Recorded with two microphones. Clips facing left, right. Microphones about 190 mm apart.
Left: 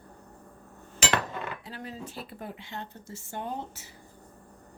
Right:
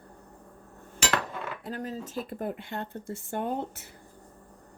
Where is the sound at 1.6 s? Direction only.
45° right (ahead or behind).